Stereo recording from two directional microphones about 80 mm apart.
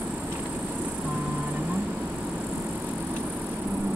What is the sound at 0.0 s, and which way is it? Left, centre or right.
Music, centre.